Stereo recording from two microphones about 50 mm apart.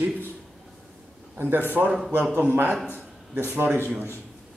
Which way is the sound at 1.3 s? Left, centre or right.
Right.